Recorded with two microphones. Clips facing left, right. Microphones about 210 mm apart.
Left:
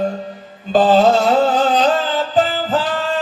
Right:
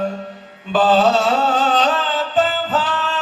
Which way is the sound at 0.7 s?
40° left (ahead or behind).